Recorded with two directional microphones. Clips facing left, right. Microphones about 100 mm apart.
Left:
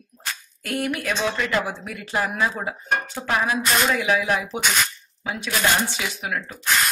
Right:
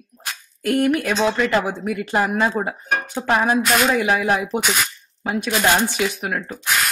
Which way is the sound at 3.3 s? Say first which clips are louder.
Right 4 dB; 50° right (ahead or behind).